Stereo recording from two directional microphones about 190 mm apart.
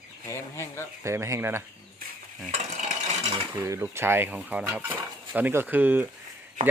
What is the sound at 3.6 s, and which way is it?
Speech, 15° right (ahead or behind).